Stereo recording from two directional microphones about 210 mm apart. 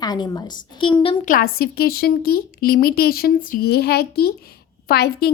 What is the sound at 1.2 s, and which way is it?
A woman's voice, 45° left (ahead or behind).